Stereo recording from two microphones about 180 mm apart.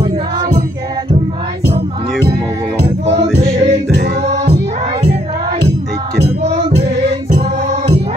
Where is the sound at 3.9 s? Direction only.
70° right (ahead or behind).